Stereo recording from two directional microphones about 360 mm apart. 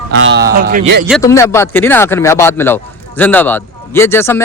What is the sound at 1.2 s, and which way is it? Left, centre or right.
Speech, centre.